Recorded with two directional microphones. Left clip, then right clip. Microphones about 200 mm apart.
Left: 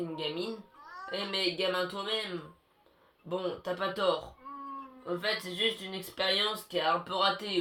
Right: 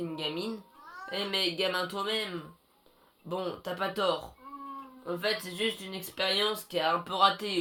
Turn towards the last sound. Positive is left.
turn(degrees=-45)  # may be behind; listen again after turning